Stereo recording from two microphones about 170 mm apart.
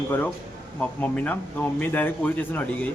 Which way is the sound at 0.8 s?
10° left (ahead or behind).